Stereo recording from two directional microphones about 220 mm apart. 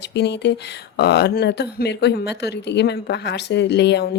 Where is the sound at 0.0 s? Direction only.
50° left (ahead or behind).